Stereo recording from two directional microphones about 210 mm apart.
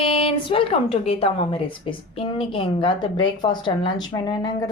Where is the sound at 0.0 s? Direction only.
25° left (ahead or behind).